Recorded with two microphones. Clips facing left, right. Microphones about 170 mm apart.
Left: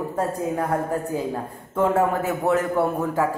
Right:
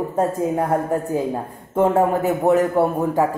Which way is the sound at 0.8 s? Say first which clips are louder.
Right 4 dB; 20° right (ahead or behind).